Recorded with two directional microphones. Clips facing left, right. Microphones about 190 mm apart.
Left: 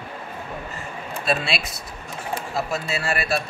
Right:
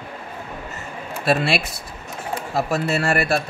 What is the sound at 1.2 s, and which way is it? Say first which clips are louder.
Speech: right 5 dB; 55° right (ahead or behind).